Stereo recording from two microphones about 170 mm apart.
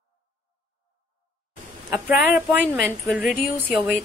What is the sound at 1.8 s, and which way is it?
A woman's voice, 10° right (ahead or behind).